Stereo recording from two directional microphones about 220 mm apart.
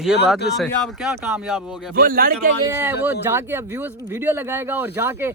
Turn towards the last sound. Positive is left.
turn(degrees=-10)  # may be behind; listen again after turning